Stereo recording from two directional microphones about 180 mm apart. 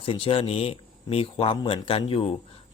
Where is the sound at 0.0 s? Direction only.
30° left (ahead or behind).